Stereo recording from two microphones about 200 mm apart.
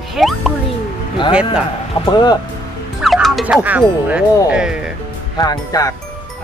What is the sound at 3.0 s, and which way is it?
Speech, centre (ahead or behind).